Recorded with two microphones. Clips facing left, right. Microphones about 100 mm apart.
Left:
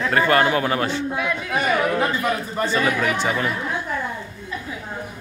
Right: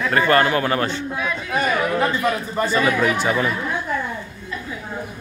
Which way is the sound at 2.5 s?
5° right (ahead or behind).